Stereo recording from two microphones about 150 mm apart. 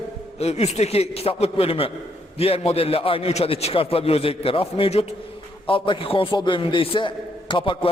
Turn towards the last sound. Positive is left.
turn(degrees=35)  # may be behind; listen again after turning